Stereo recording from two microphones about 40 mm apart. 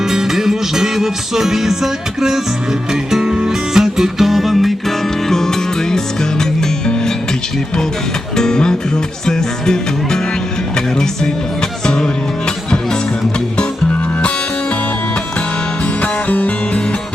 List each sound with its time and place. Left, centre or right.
0.1 s music: centre
8.4 s music: centre
16.0 s music: left